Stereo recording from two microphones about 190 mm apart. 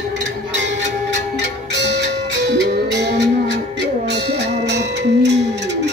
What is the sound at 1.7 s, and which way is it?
Music, 65° right (ahead or behind).